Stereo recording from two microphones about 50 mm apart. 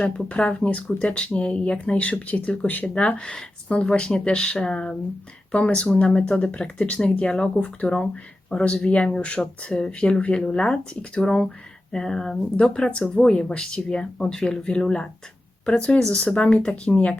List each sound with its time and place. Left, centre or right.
0.3 s speech: left
12.9 s speech: left